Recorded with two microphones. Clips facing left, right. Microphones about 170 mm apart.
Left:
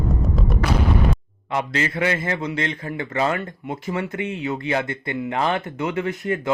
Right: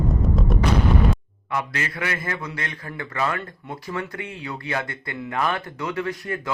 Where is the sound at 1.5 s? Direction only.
25° left (ahead or behind).